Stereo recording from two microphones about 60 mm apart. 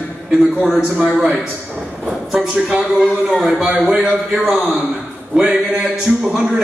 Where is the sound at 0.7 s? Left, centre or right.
Centre.